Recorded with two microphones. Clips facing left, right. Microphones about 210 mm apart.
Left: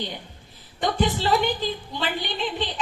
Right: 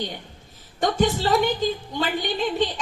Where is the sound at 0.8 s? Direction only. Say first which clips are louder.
Right 2 dB; 45° right (ahead or behind).